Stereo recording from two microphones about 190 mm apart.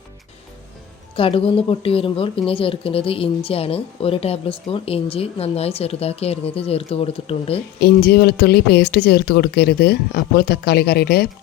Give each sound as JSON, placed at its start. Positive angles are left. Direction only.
{"t": 1.1, "sound": "a woman's voice", "side_deg": 30}
{"t": 7.8, "sound": "speech", "side_deg": 60}